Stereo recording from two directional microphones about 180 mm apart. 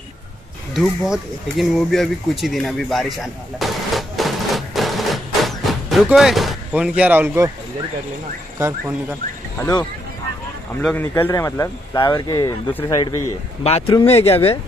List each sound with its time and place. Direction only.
0.7 s speech: centre (ahead or behind)
8.5 s speech: 15° right (ahead or behind)
9.6 s speech: 20° left (ahead or behind)
13.7 s speech: 35° left (ahead or behind)